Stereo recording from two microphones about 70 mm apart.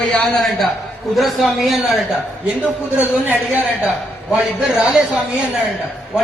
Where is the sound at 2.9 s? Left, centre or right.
Right.